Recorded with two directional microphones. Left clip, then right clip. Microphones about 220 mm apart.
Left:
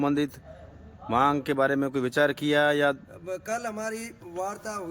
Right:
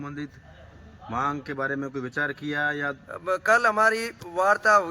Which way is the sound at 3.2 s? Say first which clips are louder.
Right 11 dB; centre (ahead or behind).